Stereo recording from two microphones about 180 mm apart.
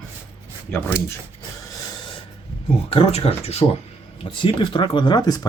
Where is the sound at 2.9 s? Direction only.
35° left (ahead or behind).